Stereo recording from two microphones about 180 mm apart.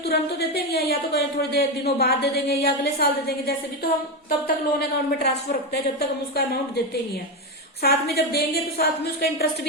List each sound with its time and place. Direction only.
0.1 s a woman's voice: 65° left (ahead or behind)
7.8 s a woman's voice: 60° left (ahead or behind)